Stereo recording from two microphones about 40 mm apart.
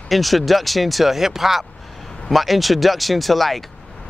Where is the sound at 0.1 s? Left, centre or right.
Centre.